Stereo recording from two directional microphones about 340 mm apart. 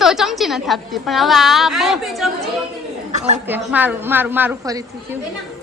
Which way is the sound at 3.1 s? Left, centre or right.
Centre.